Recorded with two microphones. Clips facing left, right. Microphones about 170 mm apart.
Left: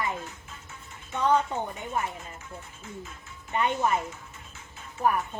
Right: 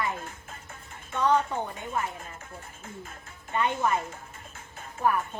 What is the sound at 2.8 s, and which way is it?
Speech, 50° right (ahead or behind).